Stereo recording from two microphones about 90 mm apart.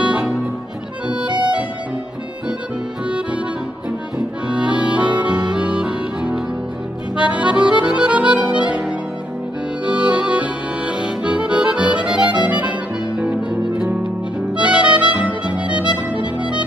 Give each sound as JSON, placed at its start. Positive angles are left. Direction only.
{"t": 1.0, "sound": "accordion", "side_deg": -10}
{"t": 1.4, "sound": "music", "side_deg": -15}
{"t": 4.5, "sound": "accordion", "side_deg": -10}
{"t": 5.1, "sound": "music", "side_deg": -15}
{"t": 7.2, "sound": "accordion", "side_deg": -15}
{"t": 12.4, "sound": "music", "side_deg": -15}